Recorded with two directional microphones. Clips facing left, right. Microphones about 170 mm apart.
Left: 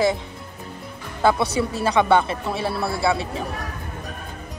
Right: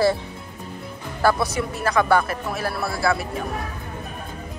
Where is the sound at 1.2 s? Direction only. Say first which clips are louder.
Left 1 dB; 30° left (ahead or behind).